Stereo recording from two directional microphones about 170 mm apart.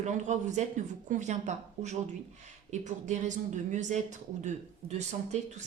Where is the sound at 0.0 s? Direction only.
45° right (ahead or behind).